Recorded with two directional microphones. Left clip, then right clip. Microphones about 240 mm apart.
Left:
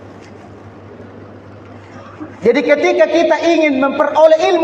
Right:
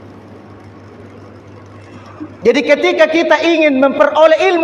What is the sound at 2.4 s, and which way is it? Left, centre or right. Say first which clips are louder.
A man's voice: right 1 dB; right.